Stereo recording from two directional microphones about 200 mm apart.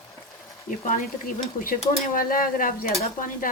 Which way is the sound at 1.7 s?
45° left (ahead or behind).